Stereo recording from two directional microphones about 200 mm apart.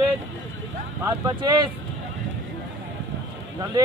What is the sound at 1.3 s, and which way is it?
Speech, 20° right (ahead or behind).